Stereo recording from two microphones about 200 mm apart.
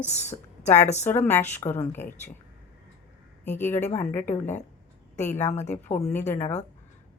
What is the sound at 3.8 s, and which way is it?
A woman's voice, 35° left (ahead or behind).